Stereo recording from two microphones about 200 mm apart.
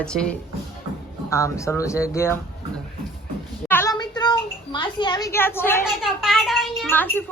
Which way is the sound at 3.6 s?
10° left (ahead or behind).